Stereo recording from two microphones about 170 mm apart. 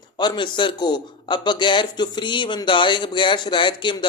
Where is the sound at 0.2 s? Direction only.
25° left (ahead or behind).